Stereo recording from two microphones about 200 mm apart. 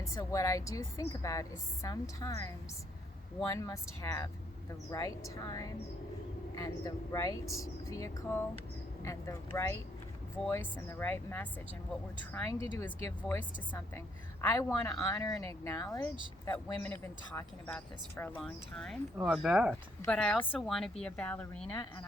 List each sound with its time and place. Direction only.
0.0 s speech: 15° left (ahead or behind)